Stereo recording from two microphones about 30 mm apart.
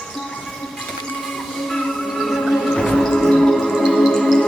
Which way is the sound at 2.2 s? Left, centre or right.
Centre.